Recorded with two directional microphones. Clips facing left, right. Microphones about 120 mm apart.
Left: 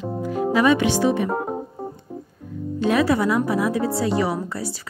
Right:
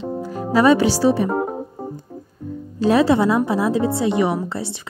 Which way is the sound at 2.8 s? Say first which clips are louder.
Right 4 dB; 30° right (ahead or behind).